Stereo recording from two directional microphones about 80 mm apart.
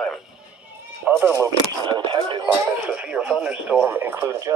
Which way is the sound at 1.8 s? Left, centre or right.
Right.